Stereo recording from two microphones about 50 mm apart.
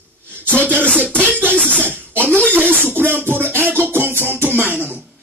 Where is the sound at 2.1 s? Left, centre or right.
Right.